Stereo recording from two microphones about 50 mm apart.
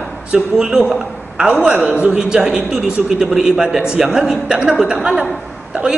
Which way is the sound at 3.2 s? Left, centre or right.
Centre.